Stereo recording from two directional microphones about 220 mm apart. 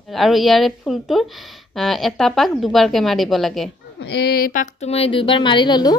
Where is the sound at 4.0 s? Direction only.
50° left (ahead or behind).